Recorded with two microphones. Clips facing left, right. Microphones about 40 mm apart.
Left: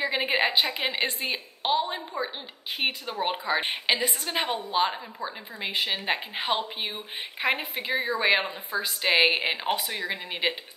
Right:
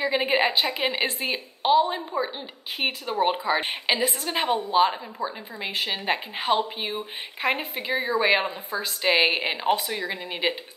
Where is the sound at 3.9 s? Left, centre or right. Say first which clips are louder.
Right 3 dB; right.